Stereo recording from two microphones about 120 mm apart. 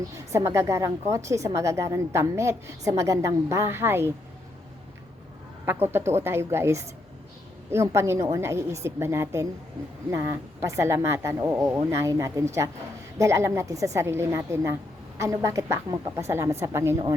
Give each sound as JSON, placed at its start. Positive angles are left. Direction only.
{"t": 0.3, "sound": "a woman's voice", "side_deg": -25}
{"t": 5.6, "sound": "a woman's voice", "side_deg": -20}